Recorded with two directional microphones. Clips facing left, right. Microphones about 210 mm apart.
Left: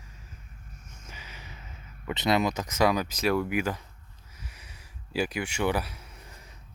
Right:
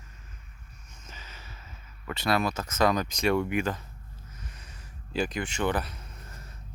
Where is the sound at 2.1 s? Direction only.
20° left (ahead or behind).